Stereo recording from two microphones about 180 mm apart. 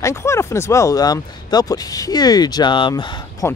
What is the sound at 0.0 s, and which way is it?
Speech, 15° left (ahead or behind).